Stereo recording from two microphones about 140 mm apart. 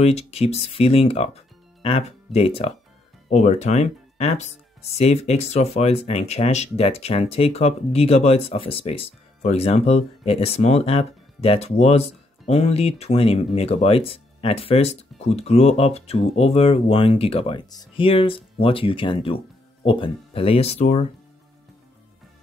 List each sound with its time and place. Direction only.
0.0 s speech: 45° left (ahead or behind)
3.3 s speech: 55° left (ahead or behind)